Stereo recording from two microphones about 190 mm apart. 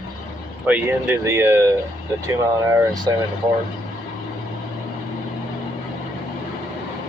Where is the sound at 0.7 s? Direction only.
10° right (ahead or behind).